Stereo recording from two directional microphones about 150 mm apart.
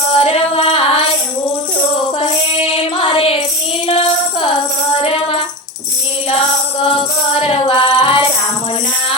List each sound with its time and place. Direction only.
0.1 s female singing: 40° left (ahead or behind)
2.6 s music: 35° left (ahead or behind)
6.9 s music: 35° left (ahead or behind)